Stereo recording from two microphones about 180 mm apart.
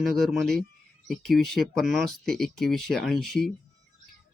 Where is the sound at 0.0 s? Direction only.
Centre (ahead or behind).